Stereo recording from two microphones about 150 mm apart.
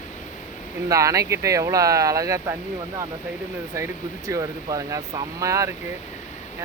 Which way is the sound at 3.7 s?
20° right (ahead or behind).